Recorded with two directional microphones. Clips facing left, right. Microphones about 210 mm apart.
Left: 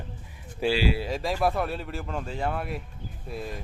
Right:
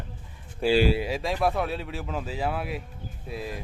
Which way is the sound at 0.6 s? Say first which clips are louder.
Right 3 dB; centre (ahead or behind).